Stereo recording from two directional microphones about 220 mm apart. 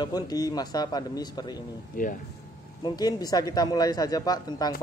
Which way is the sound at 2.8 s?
15° left (ahead or behind).